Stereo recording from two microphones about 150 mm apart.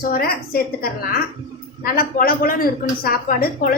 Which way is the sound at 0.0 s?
85° left.